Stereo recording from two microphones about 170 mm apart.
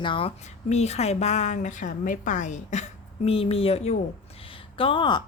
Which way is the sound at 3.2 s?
35° left (ahead or behind).